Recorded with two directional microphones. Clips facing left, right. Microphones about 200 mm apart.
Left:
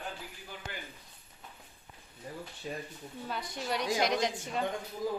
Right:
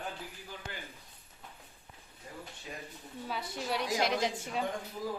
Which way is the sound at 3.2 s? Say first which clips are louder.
Even; 5° right (ahead or behind).